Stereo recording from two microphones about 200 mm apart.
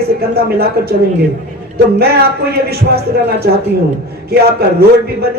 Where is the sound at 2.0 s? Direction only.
50° right (ahead or behind).